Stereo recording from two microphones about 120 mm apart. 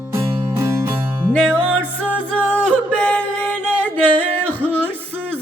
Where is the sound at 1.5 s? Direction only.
10° left (ahead or behind).